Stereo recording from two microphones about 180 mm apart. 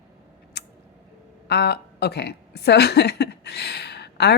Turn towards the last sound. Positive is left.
turn(degrees=65)  # may be behind; listen again after turning